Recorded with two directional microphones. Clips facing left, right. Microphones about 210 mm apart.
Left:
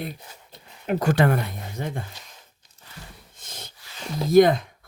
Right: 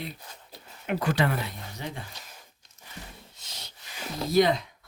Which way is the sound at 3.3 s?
50° left (ahead or behind).